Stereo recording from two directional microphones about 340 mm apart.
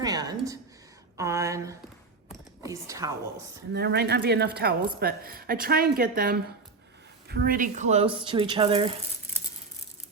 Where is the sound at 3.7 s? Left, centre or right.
Right.